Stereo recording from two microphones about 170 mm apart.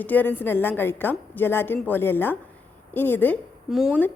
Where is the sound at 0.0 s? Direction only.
10° left (ahead or behind).